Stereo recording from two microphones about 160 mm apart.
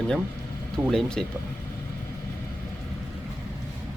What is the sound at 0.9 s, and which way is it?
Speech, 5° left (ahead or behind).